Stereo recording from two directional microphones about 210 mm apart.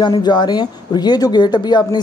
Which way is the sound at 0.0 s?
20° left (ahead or behind).